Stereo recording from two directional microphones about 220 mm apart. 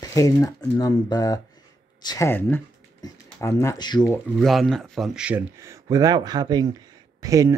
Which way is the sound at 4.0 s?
Centre (ahead or behind).